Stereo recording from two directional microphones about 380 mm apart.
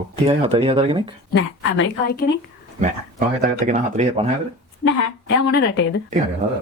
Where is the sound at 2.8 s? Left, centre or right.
Centre.